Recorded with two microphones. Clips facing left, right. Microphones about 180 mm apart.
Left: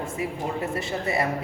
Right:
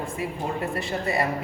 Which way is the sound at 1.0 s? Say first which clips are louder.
Even; 20° left (ahead or behind).